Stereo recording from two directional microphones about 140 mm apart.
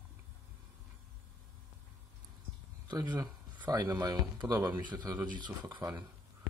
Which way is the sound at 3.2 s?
25° right (ahead or behind).